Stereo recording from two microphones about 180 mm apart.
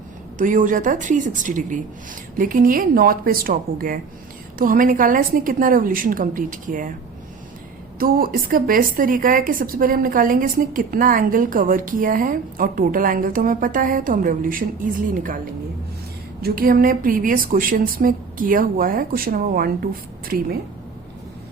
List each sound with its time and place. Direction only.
0.3 s a woman's voice: 45° right (ahead or behind)
7.9 s a woman's voice: 55° right (ahead or behind)
16.4 s a woman's voice: 55° right (ahead or behind)